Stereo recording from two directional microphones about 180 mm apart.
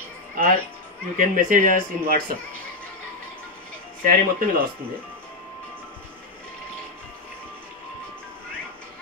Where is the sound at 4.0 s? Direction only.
50° right (ahead or behind).